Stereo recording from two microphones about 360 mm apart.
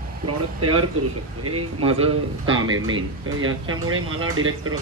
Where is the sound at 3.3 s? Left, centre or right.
Right.